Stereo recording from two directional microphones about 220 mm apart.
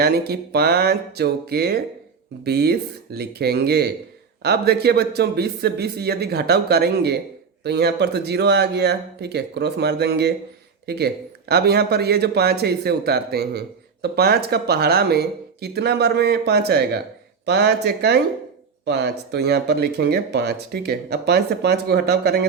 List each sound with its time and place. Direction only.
0.0 s speech: 45° right (ahead or behind)